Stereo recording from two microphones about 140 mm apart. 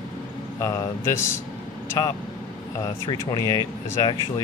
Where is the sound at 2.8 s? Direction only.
25° left (ahead or behind).